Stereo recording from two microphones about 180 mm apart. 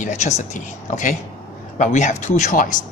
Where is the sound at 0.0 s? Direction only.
40° left (ahead or behind).